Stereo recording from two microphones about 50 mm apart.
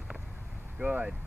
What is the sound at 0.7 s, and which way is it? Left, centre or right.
Speech, right.